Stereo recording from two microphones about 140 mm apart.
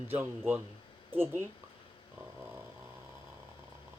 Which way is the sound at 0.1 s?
15° right (ahead or behind).